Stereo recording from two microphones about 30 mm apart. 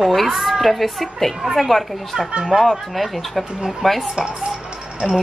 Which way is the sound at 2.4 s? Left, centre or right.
Centre.